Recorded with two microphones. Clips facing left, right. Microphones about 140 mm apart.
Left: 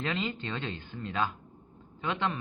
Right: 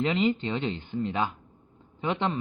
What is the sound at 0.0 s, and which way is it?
Speech, 20° right (ahead or behind).